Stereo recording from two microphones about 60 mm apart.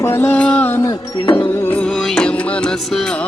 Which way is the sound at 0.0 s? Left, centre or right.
Left.